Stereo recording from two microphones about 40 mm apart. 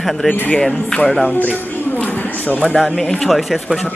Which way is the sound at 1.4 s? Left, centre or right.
Left.